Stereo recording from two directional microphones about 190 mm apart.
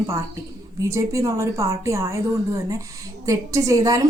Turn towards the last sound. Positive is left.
turn(degrees=-15)  # may be behind; listen again after turning